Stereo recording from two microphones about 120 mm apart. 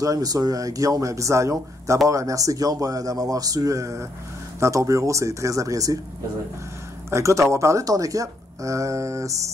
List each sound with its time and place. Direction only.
0.0 s speech: 30° right (ahead or behind)
7.1 s speech: 25° right (ahead or behind)